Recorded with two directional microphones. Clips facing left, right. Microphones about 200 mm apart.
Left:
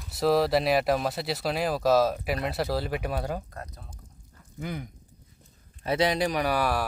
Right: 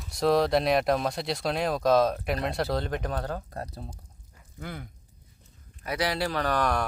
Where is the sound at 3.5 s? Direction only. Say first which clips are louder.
Right 5 dB; 35° right (ahead or behind).